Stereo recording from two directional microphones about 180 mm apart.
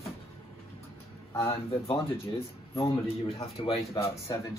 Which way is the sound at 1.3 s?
15° left (ahead or behind).